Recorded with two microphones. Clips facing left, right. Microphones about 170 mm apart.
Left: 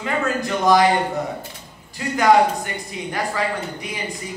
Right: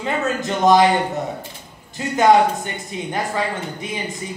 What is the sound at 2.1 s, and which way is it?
Speech, 20° right (ahead or behind).